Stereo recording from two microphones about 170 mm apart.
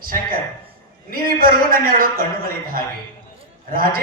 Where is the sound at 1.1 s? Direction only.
55° right (ahead or behind).